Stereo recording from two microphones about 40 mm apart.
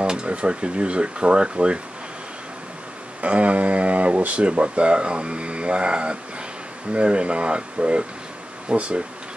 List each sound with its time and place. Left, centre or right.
0.0 s speech: right
3.2 s speech: right